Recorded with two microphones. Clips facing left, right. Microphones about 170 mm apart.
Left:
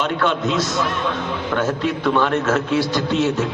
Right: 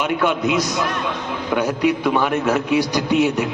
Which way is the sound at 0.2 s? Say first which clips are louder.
Right 1 dB; 15° right (ahead or behind).